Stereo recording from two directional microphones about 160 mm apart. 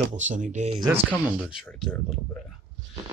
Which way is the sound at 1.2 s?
5° right (ahead or behind).